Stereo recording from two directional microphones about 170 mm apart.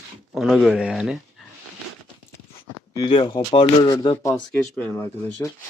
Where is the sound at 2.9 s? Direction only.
25° left (ahead or behind).